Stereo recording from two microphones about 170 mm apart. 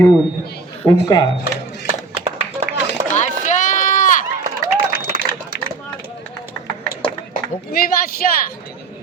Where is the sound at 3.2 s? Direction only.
45° left (ahead or behind).